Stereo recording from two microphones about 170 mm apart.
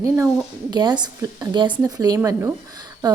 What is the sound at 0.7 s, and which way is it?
A woman's voice, 25° right (ahead or behind).